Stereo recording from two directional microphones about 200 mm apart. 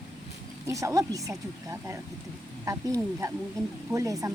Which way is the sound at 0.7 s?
15° right (ahead or behind).